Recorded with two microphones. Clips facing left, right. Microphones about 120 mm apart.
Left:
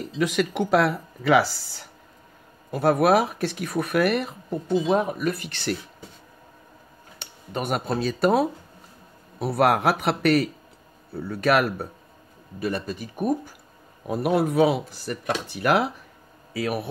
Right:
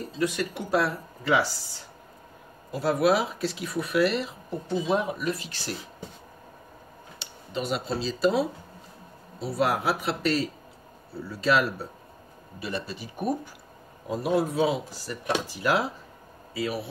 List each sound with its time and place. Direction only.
0.2 s speech: 90° left
2.7 s speech: 55° left (ahead or behind)
7.2 s speech: 55° left (ahead or behind)
14.0 s speech: 65° left (ahead or behind)